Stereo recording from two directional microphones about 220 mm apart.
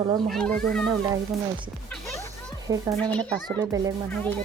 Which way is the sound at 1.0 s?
20° right (ahead or behind).